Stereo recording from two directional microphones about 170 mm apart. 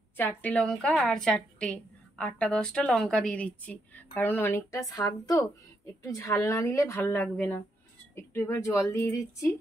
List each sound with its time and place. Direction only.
0.2 s a woman's voice: 10° left (ahead or behind)